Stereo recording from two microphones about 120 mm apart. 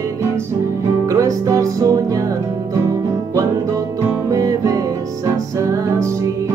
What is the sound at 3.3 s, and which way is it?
Music, 25° right (ahead or behind).